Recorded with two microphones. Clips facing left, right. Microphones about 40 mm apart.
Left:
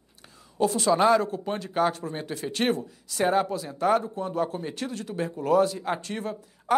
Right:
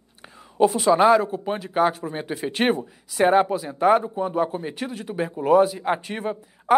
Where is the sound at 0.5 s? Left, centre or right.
Right.